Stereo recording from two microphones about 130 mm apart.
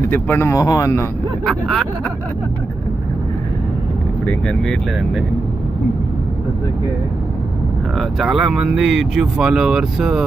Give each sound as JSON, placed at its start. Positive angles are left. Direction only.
{"t": 0.1, "sound": "speech", "side_deg": 15}
{"t": 1.4, "sound": "speech", "side_deg": 5}
{"t": 4.3, "sound": "speech", "side_deg": 5}
{"t": 8.0, "sound": "speech", "side_deg": -5}